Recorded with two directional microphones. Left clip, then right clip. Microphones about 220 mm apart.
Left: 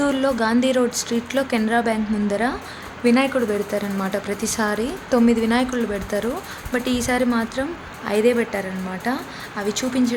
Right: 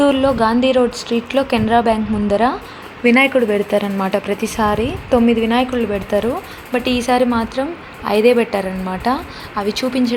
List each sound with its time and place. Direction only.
0.0 s a woman's voice: 5° right (ahead or behind)